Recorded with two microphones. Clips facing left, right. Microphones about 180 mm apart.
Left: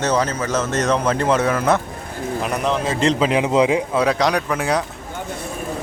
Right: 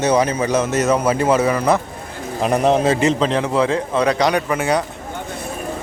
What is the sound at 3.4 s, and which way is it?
Speech, 15° left (ahead or behind).